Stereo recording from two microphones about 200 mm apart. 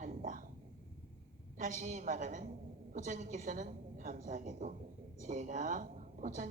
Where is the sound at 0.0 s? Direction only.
40° right (ahead or behind).